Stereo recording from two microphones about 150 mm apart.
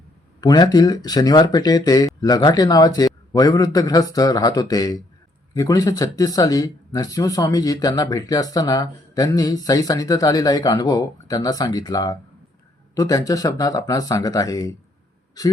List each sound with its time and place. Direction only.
0.4 s speech: 25° left (ahead or behind)